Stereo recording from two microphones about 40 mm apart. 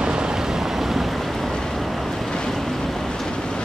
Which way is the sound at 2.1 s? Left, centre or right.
Centre.